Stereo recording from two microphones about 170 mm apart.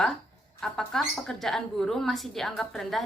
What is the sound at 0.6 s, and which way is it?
A woman's voice, 5° left (ahead or behind).